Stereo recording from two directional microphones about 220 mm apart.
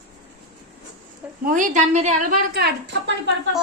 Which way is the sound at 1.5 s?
35° right (ahead or behind).